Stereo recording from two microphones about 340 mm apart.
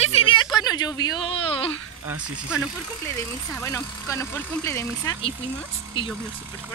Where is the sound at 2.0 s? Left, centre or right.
Centre.